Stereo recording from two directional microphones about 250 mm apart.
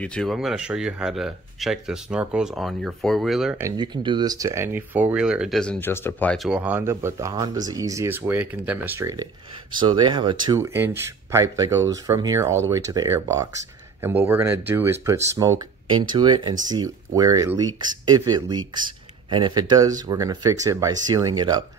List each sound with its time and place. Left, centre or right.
0.0 s speech: centre